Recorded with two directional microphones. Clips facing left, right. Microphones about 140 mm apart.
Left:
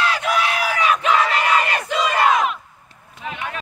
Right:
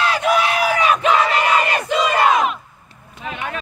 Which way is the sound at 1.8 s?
20° right (ahead or behind).